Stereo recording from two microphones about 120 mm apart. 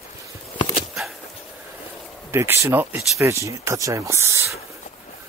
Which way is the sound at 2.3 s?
20° right (ahead or behind).